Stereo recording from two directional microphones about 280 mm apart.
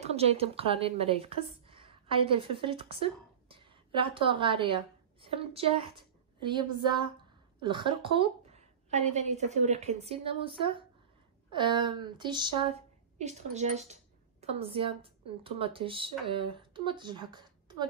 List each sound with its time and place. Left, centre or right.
0.0 s a woman's voice: right